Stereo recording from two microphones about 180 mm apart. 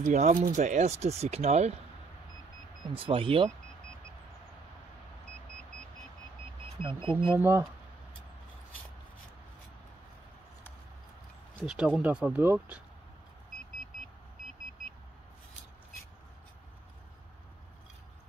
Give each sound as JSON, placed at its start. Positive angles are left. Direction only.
{"t": 0.0, "sound": "speech", "side_deg": -40}
{"t": 2.9, "sound": "speech", "side_deg": -30}
{"t": 6.8, "sound": "speech", "side_deg": -30}
{"t": 7.3, "sound": "speech", "side_deg": -10}
{"t": 11.6, "sound": "speech", "side_deg": -5}